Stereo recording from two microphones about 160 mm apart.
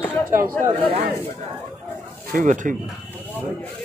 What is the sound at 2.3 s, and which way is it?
Speech, 50° right (ahead or behind).